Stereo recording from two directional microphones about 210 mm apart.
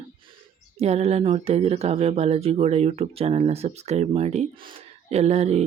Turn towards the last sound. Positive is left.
turn(degrees=-30)  # may be behind; listen again after turning